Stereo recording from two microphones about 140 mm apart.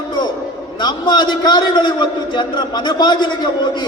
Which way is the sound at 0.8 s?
30° left (ahead or behind).